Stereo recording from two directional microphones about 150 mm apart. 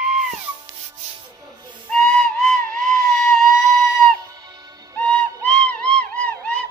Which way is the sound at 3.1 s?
5° left (ahead or behind).